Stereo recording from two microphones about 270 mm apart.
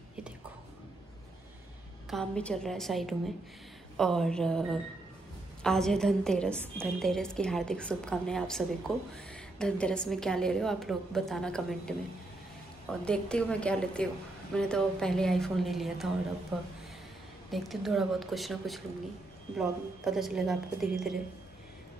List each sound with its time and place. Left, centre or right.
2.0 s a woman's voice: centre
13.0 s a woman's voice: centre
17.5 s a woman's voice: centre